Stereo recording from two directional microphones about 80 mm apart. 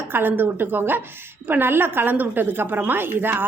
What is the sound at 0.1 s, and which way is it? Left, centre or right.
A woman's voice, right.